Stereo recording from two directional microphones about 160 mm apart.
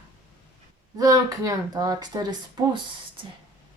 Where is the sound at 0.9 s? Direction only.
20° right (ahead or behind).